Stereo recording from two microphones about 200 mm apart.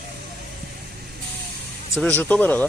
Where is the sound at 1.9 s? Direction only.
5° left (ahead or behind).